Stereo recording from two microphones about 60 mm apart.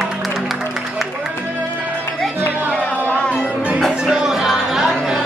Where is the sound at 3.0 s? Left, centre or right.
Centre.